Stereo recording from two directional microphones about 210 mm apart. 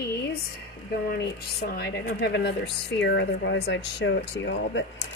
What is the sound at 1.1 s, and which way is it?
Speech, 50° left (ahead or behind).